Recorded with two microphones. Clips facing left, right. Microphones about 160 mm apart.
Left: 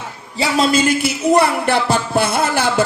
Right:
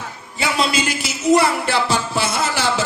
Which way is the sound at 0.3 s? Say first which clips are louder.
Left 5 dB; 40° left (ahead or behind).